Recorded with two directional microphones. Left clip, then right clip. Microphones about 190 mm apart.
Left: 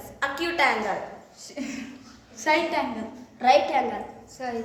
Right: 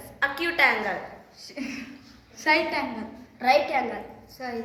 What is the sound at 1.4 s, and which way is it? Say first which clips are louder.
A woman's voice: even; centre (ahead or behind).